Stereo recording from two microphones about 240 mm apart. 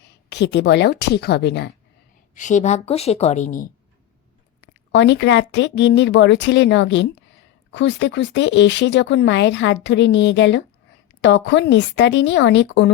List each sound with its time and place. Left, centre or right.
0.0 s speech: left
2.3 s a woman's voice: left
4.9 s speech: left